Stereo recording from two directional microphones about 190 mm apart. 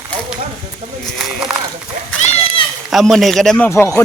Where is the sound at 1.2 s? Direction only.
5° right (ahead or behind).